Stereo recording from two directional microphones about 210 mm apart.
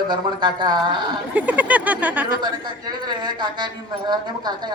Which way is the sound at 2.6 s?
20° right (ahead or behind).